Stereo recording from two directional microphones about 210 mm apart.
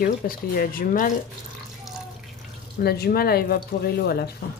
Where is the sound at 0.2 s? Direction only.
45° left (ahead or behind).